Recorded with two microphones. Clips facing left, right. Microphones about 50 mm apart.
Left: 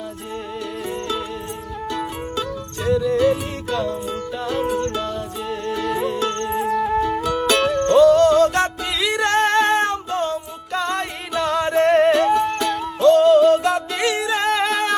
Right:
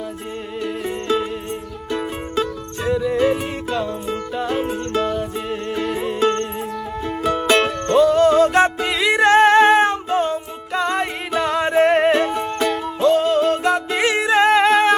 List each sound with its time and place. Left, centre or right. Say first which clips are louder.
1.9 s music: right 3 dB; centre
6.7 s music: left 8 dB; left
7.2 s music: right 2 dB; centre
13.1 s music: left 5 dB; centre
13.9 s music: right 4 dB; right